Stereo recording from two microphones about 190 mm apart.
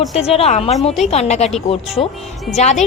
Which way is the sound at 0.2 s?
35° left (ahead or behind).